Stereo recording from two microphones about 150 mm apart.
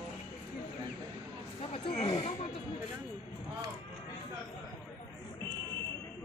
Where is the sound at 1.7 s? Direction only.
40° left (ahead or behind).